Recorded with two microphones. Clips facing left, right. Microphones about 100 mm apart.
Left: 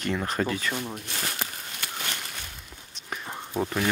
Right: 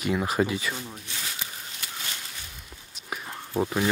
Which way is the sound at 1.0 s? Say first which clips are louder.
Left 4 dB; 60° left (ahead or behind).